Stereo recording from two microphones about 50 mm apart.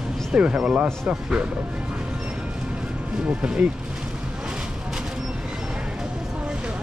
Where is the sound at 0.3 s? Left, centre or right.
Right.